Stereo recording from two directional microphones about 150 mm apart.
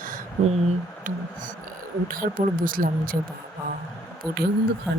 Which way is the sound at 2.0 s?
65° right (ahead or behind).